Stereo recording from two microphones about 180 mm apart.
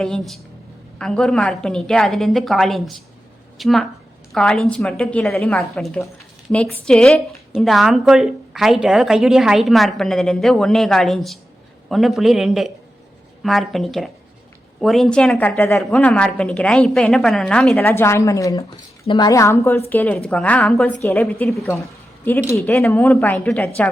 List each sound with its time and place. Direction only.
0.0 s a woman's voice: centre (ahead or behind)